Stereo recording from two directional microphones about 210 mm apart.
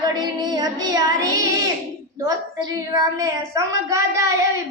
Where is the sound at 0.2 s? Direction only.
20° right (ahead or behind).